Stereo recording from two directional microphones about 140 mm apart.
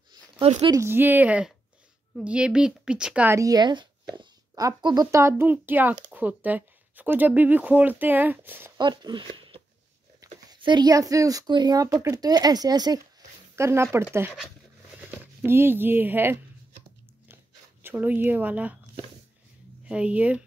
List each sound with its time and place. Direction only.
0.6 s speech: 30° right (ahead or behind)
0.8 s speech: 15° right (ahead or behind)
3.3 s a woman's voice: 25° right (ahead or behind)
8.7 s speech: 30° right (ahead or behind)
15.0 s speech: 15° right (ahead or behind)
17.8 s speech: 10° right (ahead or behind)
19.9 s speech: 10° right (ahead or behind)